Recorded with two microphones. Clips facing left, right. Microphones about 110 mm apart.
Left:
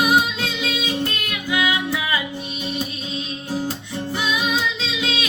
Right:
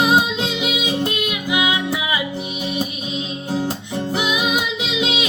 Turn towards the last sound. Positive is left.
turn(degrees=-20)  # may be behind; listen again after turning